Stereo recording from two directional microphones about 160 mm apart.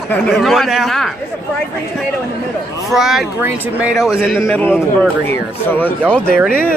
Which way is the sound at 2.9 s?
Centre (ahead or behind).